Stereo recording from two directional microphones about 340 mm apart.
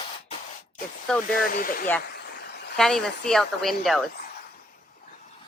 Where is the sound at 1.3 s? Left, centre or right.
Left.